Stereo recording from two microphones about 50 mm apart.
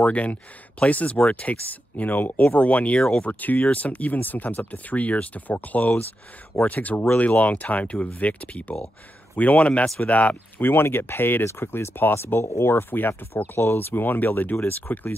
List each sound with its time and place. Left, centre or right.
0.0 s speech: left
10.6 s speech: left
12.9 s speech: left